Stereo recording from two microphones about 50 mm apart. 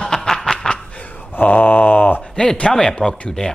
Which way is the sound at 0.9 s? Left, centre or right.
Left.